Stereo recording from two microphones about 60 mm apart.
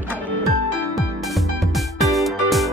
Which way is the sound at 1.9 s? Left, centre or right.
Centre.